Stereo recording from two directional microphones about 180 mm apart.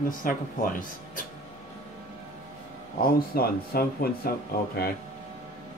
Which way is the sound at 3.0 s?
55° left (ahead or behind).